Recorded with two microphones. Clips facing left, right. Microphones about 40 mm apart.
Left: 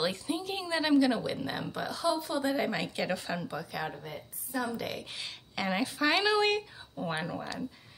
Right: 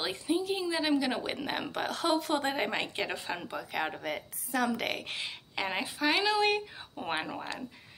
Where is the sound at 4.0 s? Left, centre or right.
Right.